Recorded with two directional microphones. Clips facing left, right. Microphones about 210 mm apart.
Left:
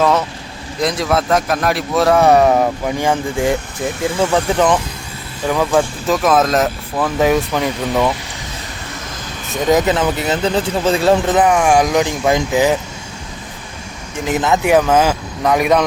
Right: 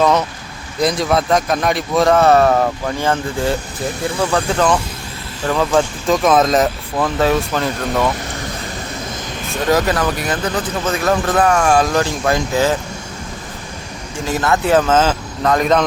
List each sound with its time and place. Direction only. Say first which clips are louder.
0.0 s a man's voice: even; centre (ahead or behind)
7.2 s a man's voice: left 3 dB; 15° left (ahead or behind)
9.6 s a man's voice: left 2 dB; 20° left (ahead or behind)
14.3 s a man's voice: left 1 dB; 20° left (ahead or behind)